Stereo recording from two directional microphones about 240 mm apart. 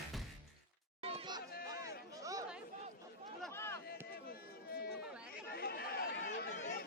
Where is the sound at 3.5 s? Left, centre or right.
Centre.